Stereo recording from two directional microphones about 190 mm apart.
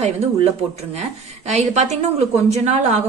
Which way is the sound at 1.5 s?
35° right (ahead or behind).